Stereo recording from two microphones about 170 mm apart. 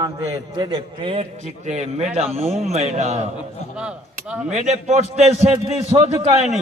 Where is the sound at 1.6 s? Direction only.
40° right (ahead or behind).